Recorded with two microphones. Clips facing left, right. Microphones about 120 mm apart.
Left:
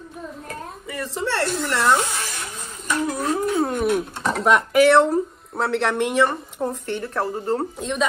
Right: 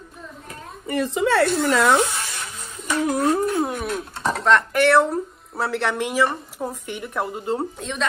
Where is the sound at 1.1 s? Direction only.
65° right (ahead or behind).